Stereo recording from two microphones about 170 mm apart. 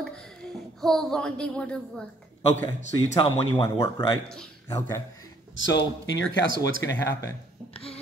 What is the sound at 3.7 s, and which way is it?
Speech, 20° left (ahead or behind).